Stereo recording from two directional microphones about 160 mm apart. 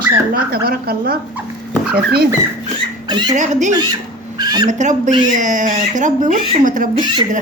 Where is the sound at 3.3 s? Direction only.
50° right (ahead or behind).